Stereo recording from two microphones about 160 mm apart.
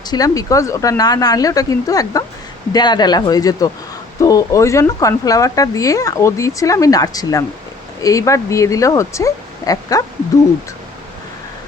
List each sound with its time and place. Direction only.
0.1 s speech: 20° left (ahead or behind)